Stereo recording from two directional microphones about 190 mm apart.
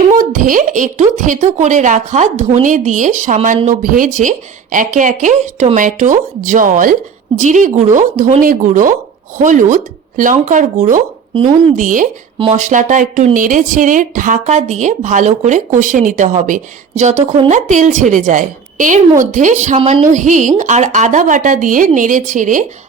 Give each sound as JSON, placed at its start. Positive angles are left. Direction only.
{"t": 0.2, "sound": "a woman's voice", "side_deg": -45}
{"t": 11.3, "sound": "a woman's voice", "side_deg": -30}
{"t": 11.8, "sound": "a woman's voice", "side_deg": -45}